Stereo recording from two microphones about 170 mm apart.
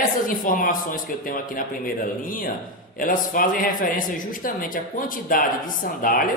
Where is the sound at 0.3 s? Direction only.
55° left (ahead or behind).